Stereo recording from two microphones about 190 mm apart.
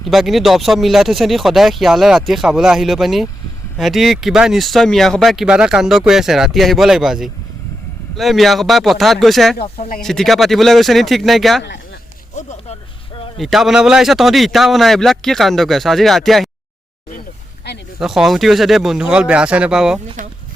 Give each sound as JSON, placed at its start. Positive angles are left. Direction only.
{"t": 0.1, "sound": "speech", "side_deg": 0}
{"t": 12.3, "sound": "speech", "side_deg": 40}
{"t": 13.4, "sound": "speech", "side_deg": 0}
{"t": 18.0, "sound": "speech", "side_deg": 0}